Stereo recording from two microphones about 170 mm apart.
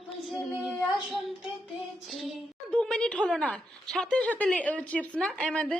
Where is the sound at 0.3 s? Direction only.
Centre (ahead or behind).